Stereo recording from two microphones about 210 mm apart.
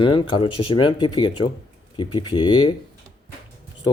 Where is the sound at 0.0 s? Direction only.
20° left (ahead or behind).